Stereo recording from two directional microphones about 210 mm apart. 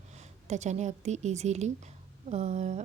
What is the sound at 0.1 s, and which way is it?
A woman's voice, 30° right (ahead or behind).